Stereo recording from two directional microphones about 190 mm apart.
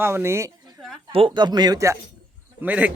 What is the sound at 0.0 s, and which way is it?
Speech, 15° right (ahead or behind).